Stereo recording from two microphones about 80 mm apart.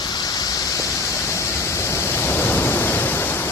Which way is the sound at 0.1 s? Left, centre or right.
Left.